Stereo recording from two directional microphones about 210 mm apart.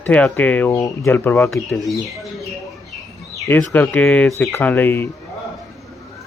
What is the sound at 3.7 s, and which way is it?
Speech, 5° left (ahead or behind).